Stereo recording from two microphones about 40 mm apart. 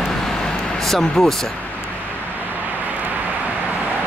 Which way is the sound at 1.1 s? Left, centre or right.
Centre.